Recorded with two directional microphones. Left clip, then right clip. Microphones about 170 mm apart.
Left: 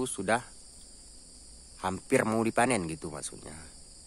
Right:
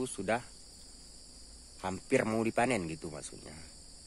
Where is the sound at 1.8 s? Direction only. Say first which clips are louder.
Left 3 dB; 20° left (ahead or behind).